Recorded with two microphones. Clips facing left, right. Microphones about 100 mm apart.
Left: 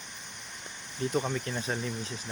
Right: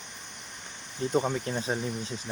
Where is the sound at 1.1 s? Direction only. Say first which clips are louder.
Right 5 dB; 25° right (ahead or behind).